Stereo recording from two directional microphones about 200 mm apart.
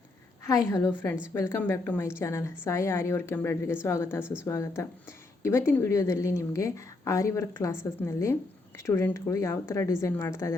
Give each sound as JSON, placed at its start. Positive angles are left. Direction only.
{"t": 0.4, "sound": "a woman's voice", "side_deg": 15}